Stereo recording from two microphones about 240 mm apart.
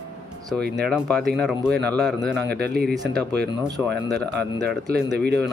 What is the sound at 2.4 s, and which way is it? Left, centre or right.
Speech, right.